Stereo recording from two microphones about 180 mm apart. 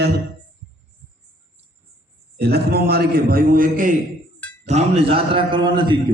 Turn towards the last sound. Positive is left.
turn(degrees=-25)  # may be behind; listen again after turning